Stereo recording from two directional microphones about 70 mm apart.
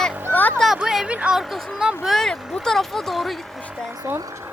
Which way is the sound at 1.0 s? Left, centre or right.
Centre.